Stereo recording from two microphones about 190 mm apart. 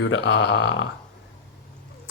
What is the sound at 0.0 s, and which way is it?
Speech, 70° left (ahead or behind).